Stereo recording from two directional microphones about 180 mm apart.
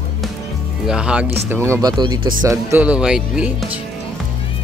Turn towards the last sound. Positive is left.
turn(degrees=-5)  # may be behind; listen again after turning